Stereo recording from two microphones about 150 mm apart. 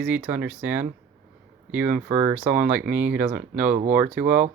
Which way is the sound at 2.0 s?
50° right (ahead or behind).